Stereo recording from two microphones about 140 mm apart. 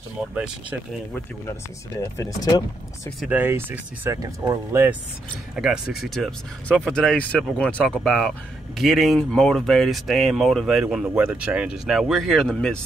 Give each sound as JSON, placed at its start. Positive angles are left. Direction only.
{"t": 0.3, "sound": "speech", "side_deg": -10}
{"t": 1.1, "sound": "speech", "side_deg": 20}
{"t": 3.3, "sound": "speech", "side_deg": -15}
{"t": 5.6, "sound": "speech", "side_deg": -5}